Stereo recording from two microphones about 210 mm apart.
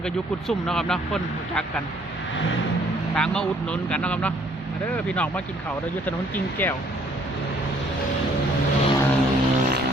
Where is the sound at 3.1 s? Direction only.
5° left (ahead or behind).